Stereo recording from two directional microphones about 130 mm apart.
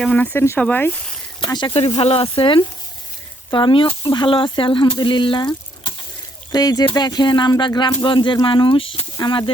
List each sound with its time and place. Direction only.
0.0 s speech: 10° left (ahead or behind)
1.4 s speech: 35° left (ahead or behind)